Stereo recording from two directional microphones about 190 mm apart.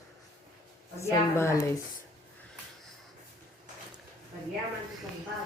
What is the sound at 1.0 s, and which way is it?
Speech, 15° left (ahead or behind).